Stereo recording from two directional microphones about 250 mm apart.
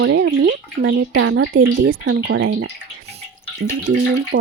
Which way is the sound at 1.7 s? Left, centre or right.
Right.